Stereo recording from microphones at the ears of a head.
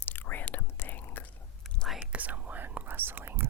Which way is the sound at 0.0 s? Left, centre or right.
Left.